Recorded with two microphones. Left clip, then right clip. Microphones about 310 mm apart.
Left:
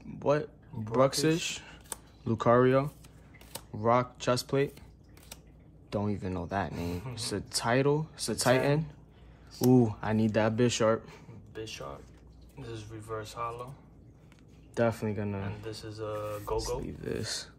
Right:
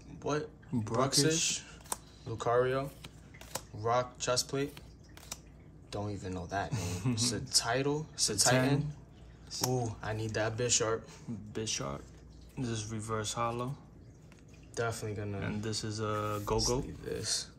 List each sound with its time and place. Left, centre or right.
0.2 s speech: left
5.9 s speech: left
6.7 s speech: right
7.2 s speech: left
9.8 s speech: left
11.5 s speech: right
14.7 s speech: left
15.6 s speech: right
16.6 s speech: left